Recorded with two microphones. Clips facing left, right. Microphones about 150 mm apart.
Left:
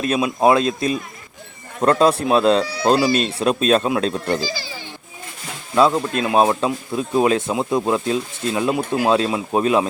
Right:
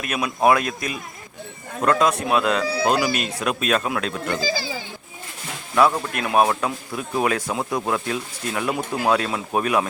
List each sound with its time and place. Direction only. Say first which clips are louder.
0.0 s speech: left 3 dB; 25° left (ahead or behind)
5.7 s speech: left 3 dB; 20° left (ahead or behind)